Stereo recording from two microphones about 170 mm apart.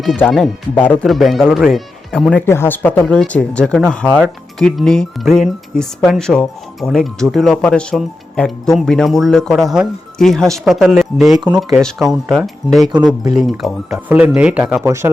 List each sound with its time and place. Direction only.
0.3 s speech: centre (ahead or behind)
2.5 s speech: 10° left (ahead or behind); by 14.8 s 5° right (ahead or behind)
14.8 s speech: 15° right (ahead or behind)